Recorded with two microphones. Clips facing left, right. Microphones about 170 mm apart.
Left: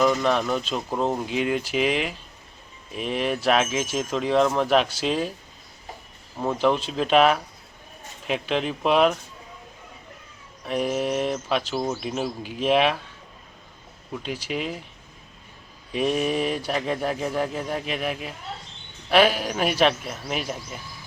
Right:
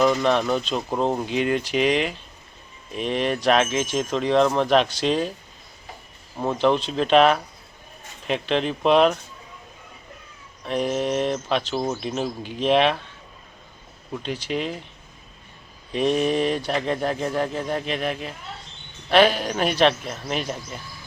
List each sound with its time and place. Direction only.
0.0 s speech: centre (ahead or behind)
6.4 s speech: 5° left (ahead or behind)
10.7 s speech: 5° left (ahead or behind)
14.1 s speech: 5° left (ahead or behind)
15.9 s speech: 5° left (ahead or behind)